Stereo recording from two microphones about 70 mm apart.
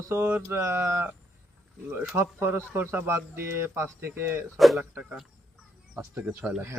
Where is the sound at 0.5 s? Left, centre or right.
Right.